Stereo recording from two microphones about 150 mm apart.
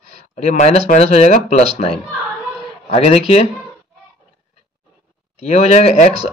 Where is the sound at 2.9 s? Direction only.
40° left (ahead or behind).